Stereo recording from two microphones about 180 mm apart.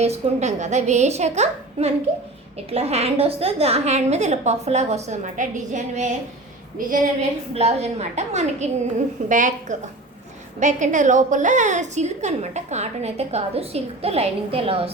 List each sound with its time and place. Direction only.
0.0 s a woman's voice: 40° right (ahead or behind)
7.5 s a woman's voice: 35° right (ahead or behind)